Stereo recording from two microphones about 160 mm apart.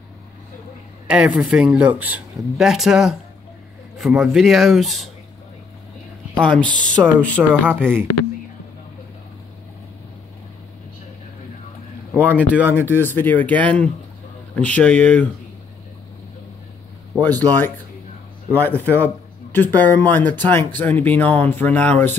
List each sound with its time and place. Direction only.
1.0 s speech: 5° right (ahead or behind)
6.4 s speech: 5° left (ahead or behind)
12.1 s speech: 10° right (ahead or behind)
12.7 s speech: 15° left (ahead or behind)
17.3 s speech: 10° left (ahead or behind)